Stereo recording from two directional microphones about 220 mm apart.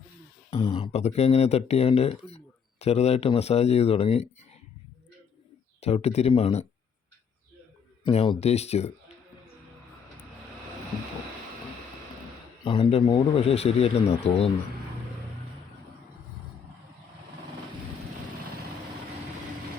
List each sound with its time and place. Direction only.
0.5 s speech: 25° left (ahead or behind)
5.8 s a man's voice: 30° left (ahead or behind)
8.0 s a man's voice: 25° left (ahead or behind)
12.6 s a man's voice: 25° left (ahead or behind)